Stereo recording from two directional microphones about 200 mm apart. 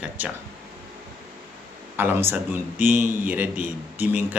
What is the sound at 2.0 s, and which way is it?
A man's voice, 10° right (ahead or behind).